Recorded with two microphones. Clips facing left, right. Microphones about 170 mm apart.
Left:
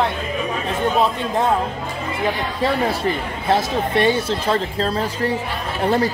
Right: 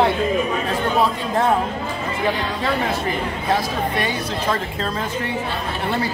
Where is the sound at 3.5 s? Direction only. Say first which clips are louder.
Left 4 dB; 25° left (ahead or behind).